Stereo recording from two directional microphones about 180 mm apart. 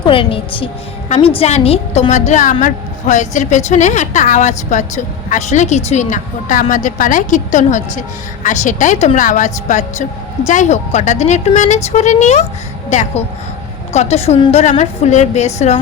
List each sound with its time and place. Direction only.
0.0 s a woman's voice: 30° left (ahead or behind)